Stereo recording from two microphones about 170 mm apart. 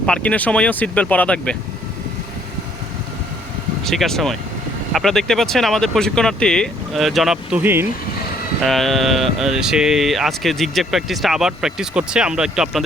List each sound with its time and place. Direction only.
0.0 s speech: 5° left (ahead or behind)
3.8 s speech: centre (ahead or behind)
8.6 s speech: centre (ahead or behind)